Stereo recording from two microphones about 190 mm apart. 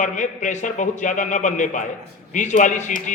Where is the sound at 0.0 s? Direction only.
40° left (ahead or behind).